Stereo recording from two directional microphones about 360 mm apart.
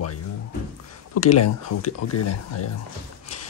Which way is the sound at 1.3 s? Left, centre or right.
Left.